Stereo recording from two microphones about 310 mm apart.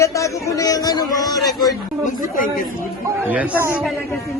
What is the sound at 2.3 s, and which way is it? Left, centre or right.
Speech, left.